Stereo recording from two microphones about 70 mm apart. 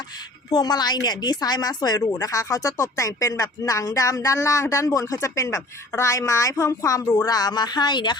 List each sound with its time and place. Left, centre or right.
0.5 s speech: left
2.0 s speech: left
7.3 s a woman's voice: left